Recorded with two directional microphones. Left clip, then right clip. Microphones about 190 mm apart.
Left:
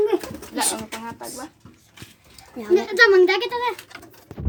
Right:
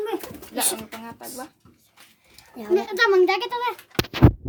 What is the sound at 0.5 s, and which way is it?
Speech, 15° right (ahead or behind).